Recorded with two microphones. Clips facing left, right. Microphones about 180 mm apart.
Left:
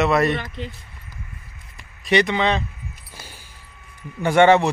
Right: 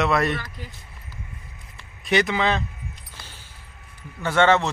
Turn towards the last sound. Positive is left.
turn(degrees=15)  # may be behind; listen again after turning